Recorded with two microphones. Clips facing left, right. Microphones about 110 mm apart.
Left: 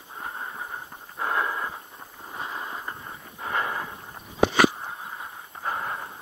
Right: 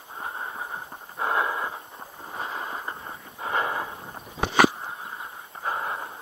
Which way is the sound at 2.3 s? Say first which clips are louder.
Right 1 dB; 20° right (ahead or behind).